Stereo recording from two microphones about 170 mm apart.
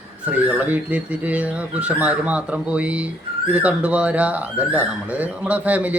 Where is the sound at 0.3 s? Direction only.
10° right (ahead or behind).